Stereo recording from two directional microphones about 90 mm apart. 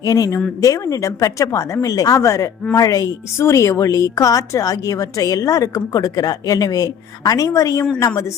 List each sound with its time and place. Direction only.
0.0 s a woman's voice: 40° left (ahead or behind)